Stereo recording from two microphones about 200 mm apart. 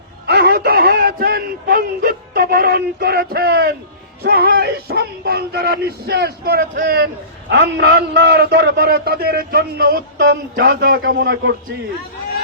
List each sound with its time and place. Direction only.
0.3 s a man's voice: 55° right (ahead or behind)